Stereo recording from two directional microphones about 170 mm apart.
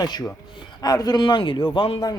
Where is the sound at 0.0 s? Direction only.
25° left (ahead or behind).